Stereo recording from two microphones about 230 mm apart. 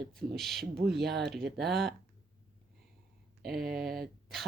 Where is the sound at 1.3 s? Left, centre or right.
Centre.